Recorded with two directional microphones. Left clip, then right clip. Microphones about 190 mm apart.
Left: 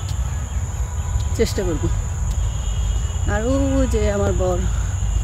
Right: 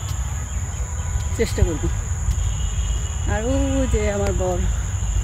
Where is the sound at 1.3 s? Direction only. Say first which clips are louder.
Left 2 dB; 15° left (ahead or behind).